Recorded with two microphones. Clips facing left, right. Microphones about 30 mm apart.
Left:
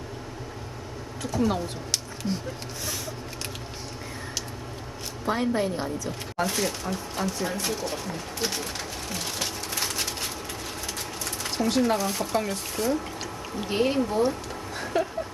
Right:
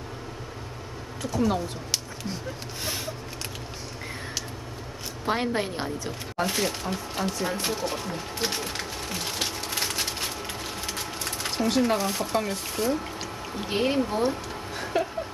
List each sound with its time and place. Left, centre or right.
1.2 s speech: centre
5.2 s a woman's voice: right
6.4 s speech: centre
7.4 s speech: right
7.7 s speech: centre
9.4 s a sound: centre
10.9 s sewing machine: centre
12.0 s speech: centre